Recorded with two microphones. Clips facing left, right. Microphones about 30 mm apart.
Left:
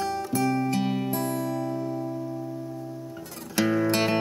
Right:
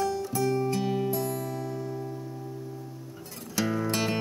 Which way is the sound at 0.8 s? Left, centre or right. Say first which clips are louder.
Left 1 dB; left.